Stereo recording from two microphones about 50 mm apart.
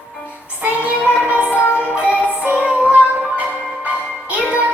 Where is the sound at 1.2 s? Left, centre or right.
Right.